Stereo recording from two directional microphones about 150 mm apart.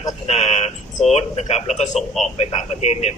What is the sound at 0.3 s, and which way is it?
Speech, 45° left (ahead or behind).